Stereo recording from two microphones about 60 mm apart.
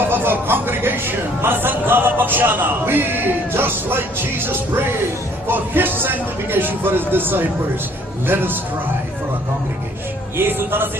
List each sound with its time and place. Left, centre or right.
0.0 s speech: right
10.3 s speech: right